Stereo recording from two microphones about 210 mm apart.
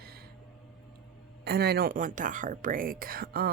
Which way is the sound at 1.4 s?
50° right (ahead or behind).